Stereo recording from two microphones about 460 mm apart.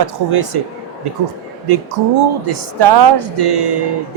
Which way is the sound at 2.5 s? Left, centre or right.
Right.